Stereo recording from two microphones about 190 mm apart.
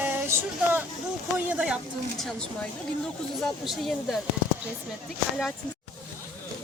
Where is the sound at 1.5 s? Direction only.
5° right (ahead or behind).